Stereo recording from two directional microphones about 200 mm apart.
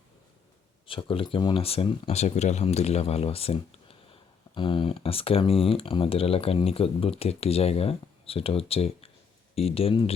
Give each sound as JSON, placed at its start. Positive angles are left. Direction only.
{"t": 0.9, "sound": "speech", "side_deg": 25}